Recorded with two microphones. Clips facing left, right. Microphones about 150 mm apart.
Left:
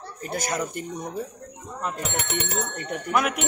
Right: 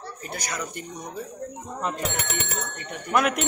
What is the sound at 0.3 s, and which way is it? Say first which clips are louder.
Speech: left 6 dB; 50° left (ahead or behind).